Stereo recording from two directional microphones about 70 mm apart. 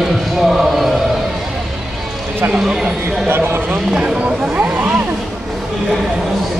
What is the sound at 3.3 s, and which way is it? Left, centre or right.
Speech, right.